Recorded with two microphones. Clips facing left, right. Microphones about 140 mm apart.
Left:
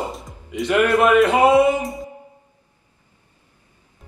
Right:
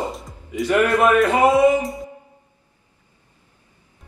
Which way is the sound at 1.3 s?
25° left (ahead or behind).